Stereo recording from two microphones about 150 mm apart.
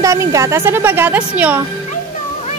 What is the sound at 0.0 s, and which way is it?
Speech, 20° right (ahead or behind).